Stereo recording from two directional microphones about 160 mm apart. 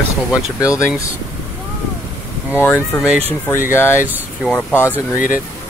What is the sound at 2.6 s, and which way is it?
Speech, 15° left (ahead or behind).